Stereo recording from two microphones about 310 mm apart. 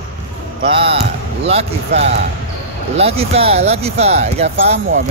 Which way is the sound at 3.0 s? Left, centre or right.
Centre.